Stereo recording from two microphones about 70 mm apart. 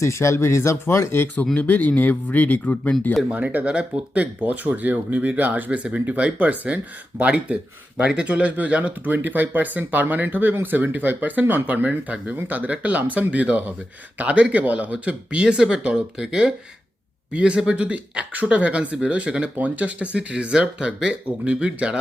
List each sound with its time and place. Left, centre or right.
0.0 s speech: left
1.5 s speech: left
3.3 s speech: right